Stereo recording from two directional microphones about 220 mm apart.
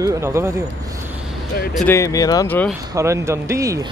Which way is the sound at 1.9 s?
15° left (ahead or behind).